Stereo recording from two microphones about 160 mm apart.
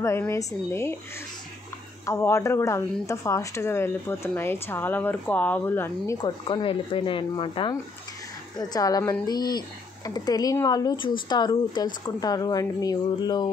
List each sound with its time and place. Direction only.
0.0 s a woman's voice: 15° left (ahead or behind)
2.0 s a woman's voice: 15° left (ahead or behind)
6.2 s speech: 30° left (ahead or behind)